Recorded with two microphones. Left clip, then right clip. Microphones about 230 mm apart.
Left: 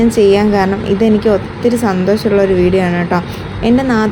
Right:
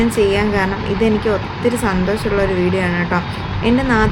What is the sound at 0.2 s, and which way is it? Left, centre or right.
Speech, centre.